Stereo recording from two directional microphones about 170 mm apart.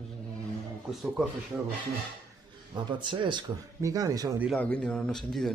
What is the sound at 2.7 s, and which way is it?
Speech, 25° right (ahead or behind).